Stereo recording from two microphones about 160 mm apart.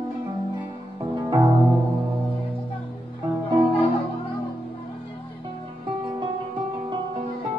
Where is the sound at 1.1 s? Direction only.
25° right (ahead or behind).